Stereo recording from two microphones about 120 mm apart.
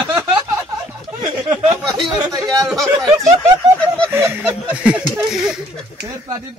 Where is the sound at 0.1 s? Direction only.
25° right (ahead or behind).